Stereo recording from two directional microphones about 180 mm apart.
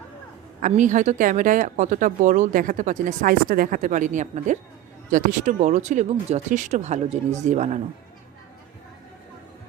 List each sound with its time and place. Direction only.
0.6 s speech: 45° right (ahead or behind)